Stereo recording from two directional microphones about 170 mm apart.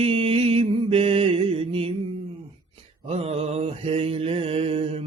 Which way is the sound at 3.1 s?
35° right (ahead or behind).